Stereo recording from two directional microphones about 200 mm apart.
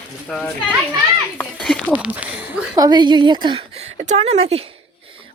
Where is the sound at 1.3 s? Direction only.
5° left (ahead or behind).